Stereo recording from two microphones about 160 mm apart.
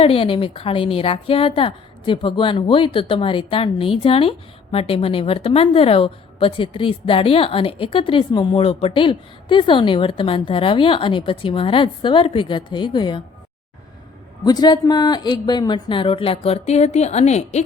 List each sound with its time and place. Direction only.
0.0 s a woman's voice: 35° left (ahead or behind)
14.4 s a woman's voice: 25° left (ahead or behind); by 17.6 s 45° left (ahead or behind)